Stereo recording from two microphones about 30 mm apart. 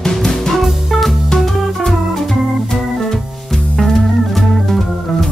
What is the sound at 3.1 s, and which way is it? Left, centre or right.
Music, centre.